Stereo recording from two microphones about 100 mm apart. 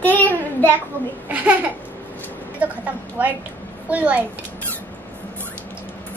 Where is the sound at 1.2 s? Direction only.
15° right (ahead or behind).